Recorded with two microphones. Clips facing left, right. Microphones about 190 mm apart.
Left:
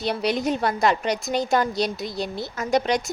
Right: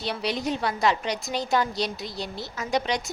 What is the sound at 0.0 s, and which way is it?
A woman's voice, 45° left (ahead or behind).